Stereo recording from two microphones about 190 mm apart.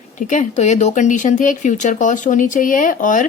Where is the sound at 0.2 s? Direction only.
40° left (ahead or behind).